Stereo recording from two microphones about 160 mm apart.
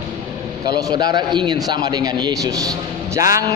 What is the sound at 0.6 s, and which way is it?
A man's voice, 25° right (ahead or behind).